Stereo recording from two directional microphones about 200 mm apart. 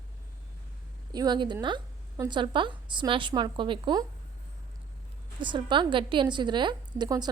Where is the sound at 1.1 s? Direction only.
20° right (ahead or behind).